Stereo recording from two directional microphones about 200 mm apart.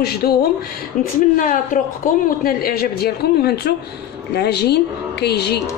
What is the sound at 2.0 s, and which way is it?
A woman's voice, 45° left (ahead or behind).